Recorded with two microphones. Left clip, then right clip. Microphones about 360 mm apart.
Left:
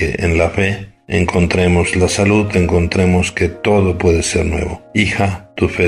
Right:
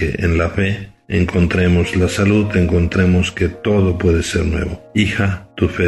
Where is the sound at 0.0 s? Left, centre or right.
Centre.